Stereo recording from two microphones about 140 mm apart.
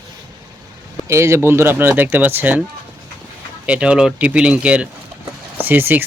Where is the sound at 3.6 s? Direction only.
10° right (ahead or behind).